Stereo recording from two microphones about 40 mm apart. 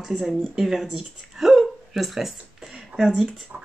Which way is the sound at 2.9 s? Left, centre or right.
Centre.